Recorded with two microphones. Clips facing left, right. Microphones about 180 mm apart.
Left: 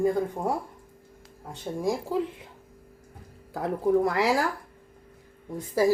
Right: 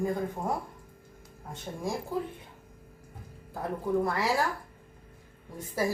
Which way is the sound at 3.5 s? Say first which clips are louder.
Left 6 dB; 90° left.